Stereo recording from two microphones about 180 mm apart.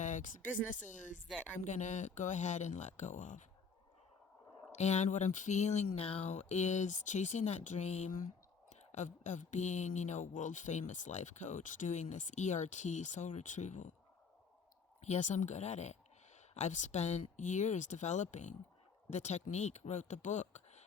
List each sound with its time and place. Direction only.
0.0 s speech: 45° left (ahead or behind)
4.8 s speech: 40° left (ahead or behind)
15.0 s speech: 40° left (ahead or behind)